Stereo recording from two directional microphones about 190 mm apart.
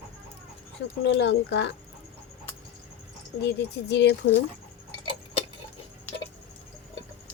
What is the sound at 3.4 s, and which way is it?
Speech, 65° left (ahead or behind).